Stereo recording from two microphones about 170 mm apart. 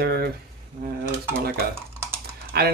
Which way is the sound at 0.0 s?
65° right (ahead or behind).